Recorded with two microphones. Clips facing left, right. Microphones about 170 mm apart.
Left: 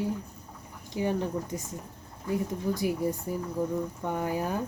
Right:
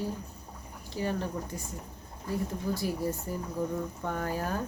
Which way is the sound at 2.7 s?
15° left (ahead or behind).